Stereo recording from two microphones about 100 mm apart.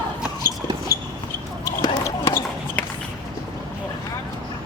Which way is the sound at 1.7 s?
35° left (ahead or behind).